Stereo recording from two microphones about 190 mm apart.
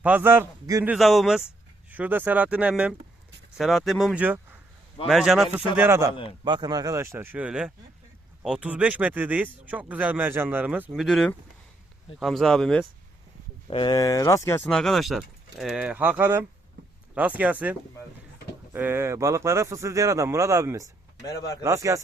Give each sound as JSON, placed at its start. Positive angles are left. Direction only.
{"t": 0.0, "sound": "speech", "side_deg": -10}
{"t": 0.9, "sound": "speech", "side_deg": 0}
{"t": 13.7, "sound": "speech", "side_deg": 25}